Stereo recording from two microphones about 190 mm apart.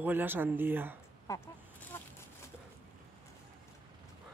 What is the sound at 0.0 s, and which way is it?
Speech, 10° right (ahead or behind).